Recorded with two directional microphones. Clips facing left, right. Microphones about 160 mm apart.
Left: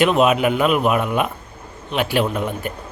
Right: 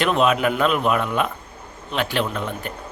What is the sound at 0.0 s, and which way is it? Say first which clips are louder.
Speech: left 3 dB; 10° left (ahead or behind).